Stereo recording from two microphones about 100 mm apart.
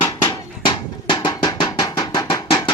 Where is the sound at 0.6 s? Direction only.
45° left (ahead or behind).